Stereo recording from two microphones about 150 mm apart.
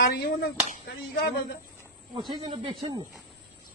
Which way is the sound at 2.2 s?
30° right (ahead or behind).